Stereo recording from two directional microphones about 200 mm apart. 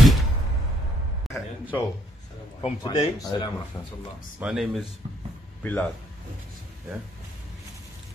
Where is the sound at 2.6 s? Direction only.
25° left (ahead or behind).